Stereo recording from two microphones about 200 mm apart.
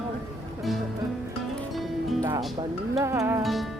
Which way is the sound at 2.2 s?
15° right (ahead or behind).